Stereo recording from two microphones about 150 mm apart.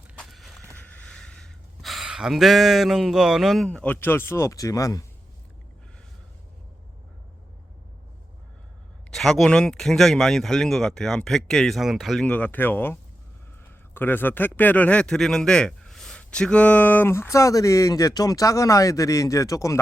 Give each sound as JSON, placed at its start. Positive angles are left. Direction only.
{"t": 0.2, "sound": "a sound", "side_deg": 0}
{"t": 0.9, "sound": "speech", "side_deg": 5}
{"t": 9.0, "sound": "a man's voice", "side_deg": 0}